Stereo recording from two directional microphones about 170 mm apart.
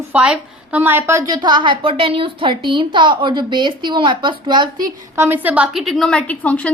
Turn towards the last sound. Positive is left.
turn(degrees=10)  # may be behind; listen again after turning